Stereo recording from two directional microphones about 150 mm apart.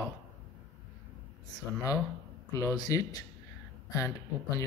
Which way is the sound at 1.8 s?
20° left (ahead or behind).